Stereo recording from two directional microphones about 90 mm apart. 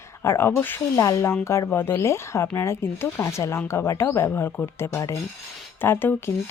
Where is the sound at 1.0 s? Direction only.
35° left (ahead or behind).